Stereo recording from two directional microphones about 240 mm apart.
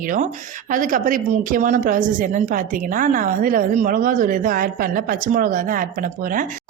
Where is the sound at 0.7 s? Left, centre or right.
Right.